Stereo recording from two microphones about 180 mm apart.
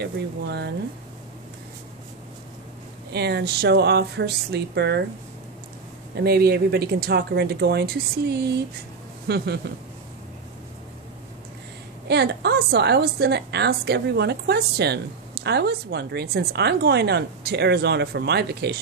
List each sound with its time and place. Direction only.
0.0 s speech: 65° right (ahead or behind)
3.1 s speech: 65° right (ahead or behind)
6.1 s speech: 60° right (ahead or behind)
12.1 s speech: 65° right (ahead or behind)